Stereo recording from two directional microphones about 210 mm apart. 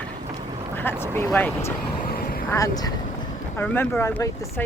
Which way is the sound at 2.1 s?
45° left (ahead or behind).